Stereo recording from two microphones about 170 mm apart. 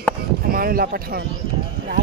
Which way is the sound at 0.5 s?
60° right (ahead or behind).